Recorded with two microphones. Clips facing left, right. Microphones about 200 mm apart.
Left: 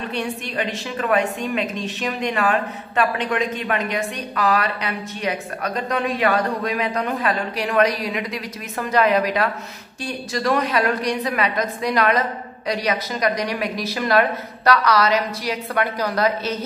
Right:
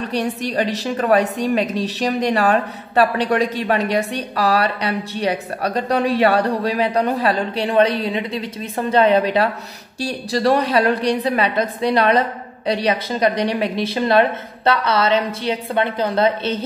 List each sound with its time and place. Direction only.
0.1 s a woman's voice: 40° right (ahead or behind)